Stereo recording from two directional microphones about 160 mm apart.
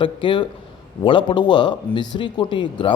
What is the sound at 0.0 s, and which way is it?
A man's voice, 30° left (ahead or behind).